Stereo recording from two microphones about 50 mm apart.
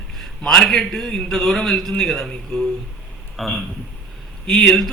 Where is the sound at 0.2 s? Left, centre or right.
Centre.